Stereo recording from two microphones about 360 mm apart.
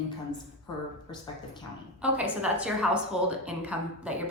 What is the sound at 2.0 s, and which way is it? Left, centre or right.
A woman's voice, centre.